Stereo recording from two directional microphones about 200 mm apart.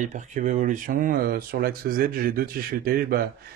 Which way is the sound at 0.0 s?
35° right (ahead or behind).